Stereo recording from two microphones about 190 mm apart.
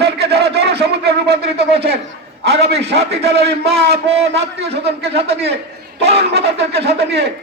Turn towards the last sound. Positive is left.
turn(degrees=-60)  # may be behind; listen again after turning